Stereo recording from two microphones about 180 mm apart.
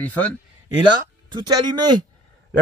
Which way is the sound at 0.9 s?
25° right (ahead or behind).